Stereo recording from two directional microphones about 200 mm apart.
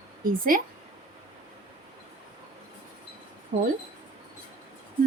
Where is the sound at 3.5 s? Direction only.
40° right (ahead or behind).